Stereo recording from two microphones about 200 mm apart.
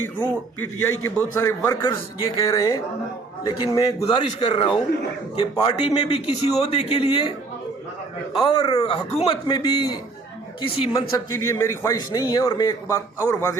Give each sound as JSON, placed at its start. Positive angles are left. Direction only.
{"t": 0.6, "sound": "a man's voice", "side_deg": 10}
{"t": 1.8, "sound": "a man's voice", "side_deg": 25}
{"t": 4.0, "sound": "a man's voice", "side_deg": 30}
{"t": 8.4, "sound": "a man's voice", "side_deg": 25}
{"t": 11.3, "sound": "a man's voice", "side_deg": 15}